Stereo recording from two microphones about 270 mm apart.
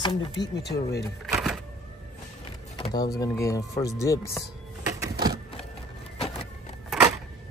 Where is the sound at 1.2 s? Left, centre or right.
Centre.